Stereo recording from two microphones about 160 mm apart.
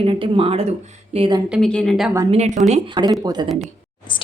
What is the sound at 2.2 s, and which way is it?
A woman's voice, 45° right (ahead or behind).